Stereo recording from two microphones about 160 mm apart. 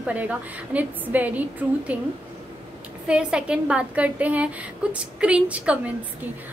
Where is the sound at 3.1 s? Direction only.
5° right (ahead or behind).